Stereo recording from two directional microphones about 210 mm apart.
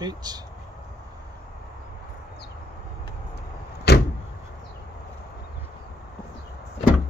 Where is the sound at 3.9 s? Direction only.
50° left (ahead or behind).